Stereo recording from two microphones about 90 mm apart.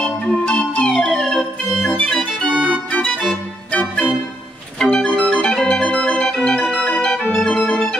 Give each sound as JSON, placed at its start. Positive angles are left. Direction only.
{"t": 0.0, "sound": "organ", "side_deg": 10}
{"t": 2.5, "sound": "organ", "side_deg": -10}
{"t": 2.9, "sound": "organ", "side_deg": 15}
{"t": 4.7, "sound": "organ", "side_deg": 10}